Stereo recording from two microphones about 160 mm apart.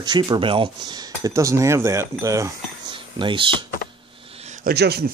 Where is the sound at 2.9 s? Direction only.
30° right (ahead or behind).